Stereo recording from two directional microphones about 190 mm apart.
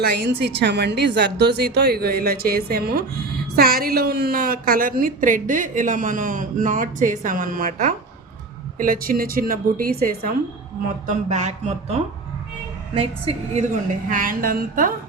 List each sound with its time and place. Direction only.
0.0 s a woman's voice: 60° right (ahead or behind)
11.0 s speech: 40° right (ahead or behind)
14.1 s a woman's voice: 45° right (ahead or behind)